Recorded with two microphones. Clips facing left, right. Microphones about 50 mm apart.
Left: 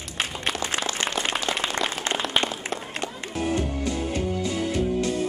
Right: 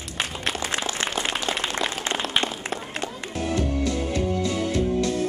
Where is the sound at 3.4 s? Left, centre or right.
Left.